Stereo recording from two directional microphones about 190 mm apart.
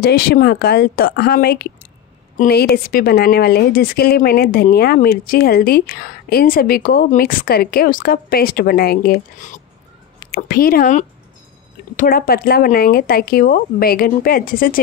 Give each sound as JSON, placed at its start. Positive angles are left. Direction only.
{"t": 0.0, "sound": "a woman's voice", "side_deg": 55}